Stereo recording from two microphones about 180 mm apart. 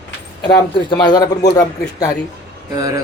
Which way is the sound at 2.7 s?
20° right (ahead or behind).